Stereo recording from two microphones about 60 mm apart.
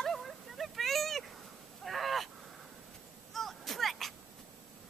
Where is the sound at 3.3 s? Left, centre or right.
Centre.